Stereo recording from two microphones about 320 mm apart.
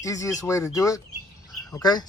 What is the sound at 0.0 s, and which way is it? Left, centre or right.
Speech, centre.